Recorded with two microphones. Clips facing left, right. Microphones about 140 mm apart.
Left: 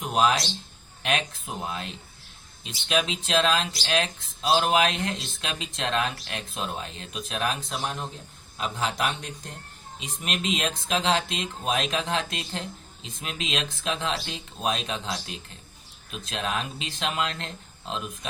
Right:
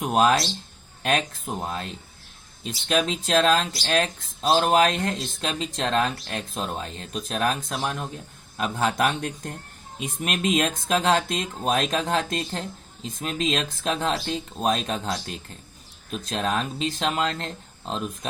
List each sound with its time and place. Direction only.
0.1 s speech: 50° right (ahead or behind)